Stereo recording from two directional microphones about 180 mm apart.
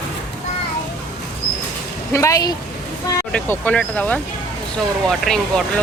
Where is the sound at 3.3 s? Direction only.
5° left (ahead or behind).